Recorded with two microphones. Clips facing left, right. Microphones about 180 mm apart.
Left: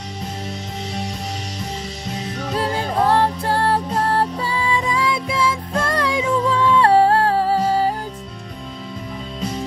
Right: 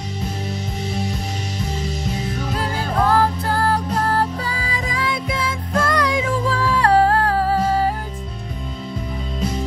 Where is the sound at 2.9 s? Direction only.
30° left (ahead or behind).